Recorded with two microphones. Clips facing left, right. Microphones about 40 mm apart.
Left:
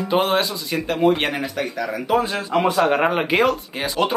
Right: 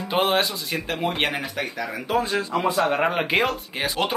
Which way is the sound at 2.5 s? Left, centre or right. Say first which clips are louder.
Left 7 dB; left.